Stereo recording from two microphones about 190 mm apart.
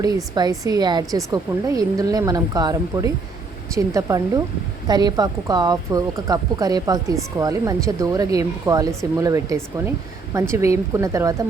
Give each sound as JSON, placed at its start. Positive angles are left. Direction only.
{"t": 0.6, "sound": "a woman's voice", "side_deg": -20}